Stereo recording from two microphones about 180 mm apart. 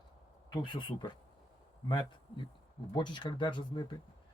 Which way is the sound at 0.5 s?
25° left (ahead or behind).